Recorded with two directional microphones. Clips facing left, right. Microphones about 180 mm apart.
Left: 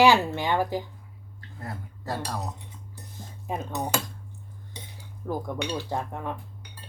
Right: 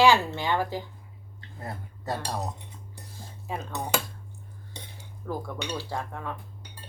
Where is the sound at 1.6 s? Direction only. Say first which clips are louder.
Even; 20° right (ahead or behind).